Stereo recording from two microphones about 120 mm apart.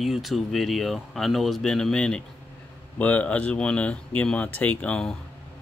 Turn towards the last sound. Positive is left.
turn(degrees=15)  # may be behind; listen again after turning